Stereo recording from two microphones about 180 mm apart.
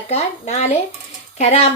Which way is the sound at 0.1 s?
40° left (ahead or behind).